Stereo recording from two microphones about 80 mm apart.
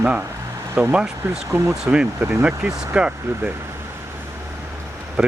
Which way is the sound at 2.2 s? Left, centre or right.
Right.